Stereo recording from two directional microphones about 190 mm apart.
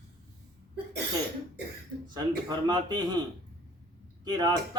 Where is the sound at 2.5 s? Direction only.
20° right (ahead or behind).